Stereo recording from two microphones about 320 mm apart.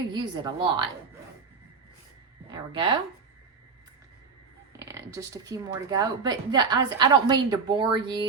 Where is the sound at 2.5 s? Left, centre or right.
Centre.